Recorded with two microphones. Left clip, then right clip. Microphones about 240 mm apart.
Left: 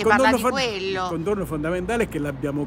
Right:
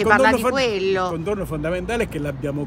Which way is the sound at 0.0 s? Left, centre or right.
Centre.